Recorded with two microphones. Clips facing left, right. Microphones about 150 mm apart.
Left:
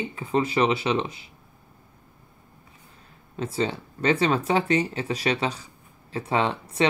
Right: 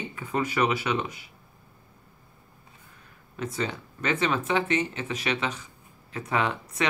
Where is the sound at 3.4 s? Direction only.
30° left (ahead or behind).